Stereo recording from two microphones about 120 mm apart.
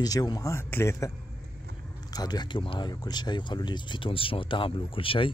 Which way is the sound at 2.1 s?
35° left (ahead or behind).